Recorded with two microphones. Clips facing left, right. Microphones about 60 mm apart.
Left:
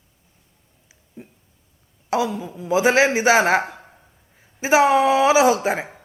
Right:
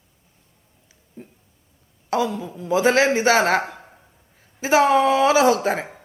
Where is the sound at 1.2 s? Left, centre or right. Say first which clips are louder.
Even; centre.